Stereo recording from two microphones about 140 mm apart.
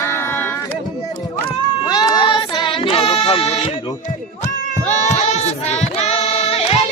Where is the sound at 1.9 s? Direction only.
30° left (ahead or behind); by 3.7 s 45° left (ahead or behind).